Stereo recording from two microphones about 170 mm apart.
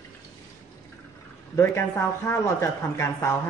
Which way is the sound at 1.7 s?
15° left (ahead or behind).